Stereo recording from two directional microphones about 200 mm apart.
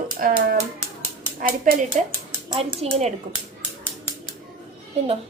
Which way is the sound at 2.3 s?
30° right (ahead or behind).